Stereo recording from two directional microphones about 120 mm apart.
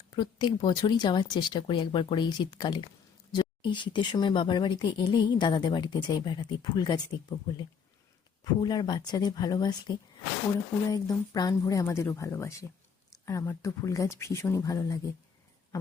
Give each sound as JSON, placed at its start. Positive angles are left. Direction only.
{"t": 0.1, "sound": "speech", "side_deg": 40}
{"t": 8.6, "sound": "speech", "side_deg": 35}
{"t": 10.9, "sound": "speech", "side_deg": 30}